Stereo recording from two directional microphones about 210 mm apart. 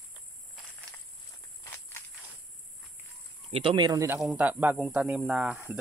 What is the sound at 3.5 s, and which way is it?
Speech, 20° right (ahead or behind).